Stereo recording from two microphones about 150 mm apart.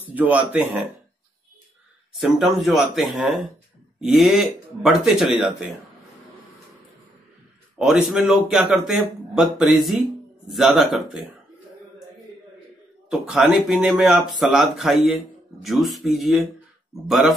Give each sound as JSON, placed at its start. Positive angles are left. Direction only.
{"t": 0.1, "sound": "speech", "side_deg": -10}
{"t": 2.1, "sound": "speech", "side_deg": 0}
{"t": 7.8, "sound": "speech", "side_deg": -5}
{"t": 13.1, "sound": "speech", "side_deg": -5}